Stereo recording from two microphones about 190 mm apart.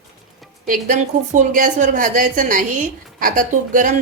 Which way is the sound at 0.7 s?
40° right (ahead or behind).